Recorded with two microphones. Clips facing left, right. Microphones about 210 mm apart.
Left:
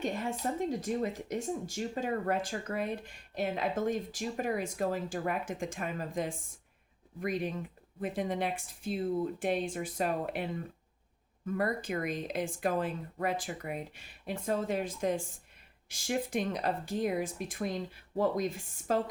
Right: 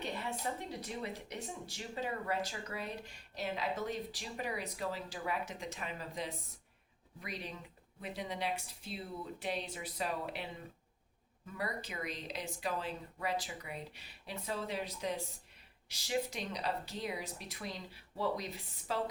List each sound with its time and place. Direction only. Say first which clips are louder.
0.0 s speech: left 6 dB; 45° left (ahead or behind)